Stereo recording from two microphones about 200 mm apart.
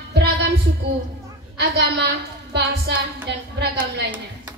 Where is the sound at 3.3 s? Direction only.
60° right (ahead or behind).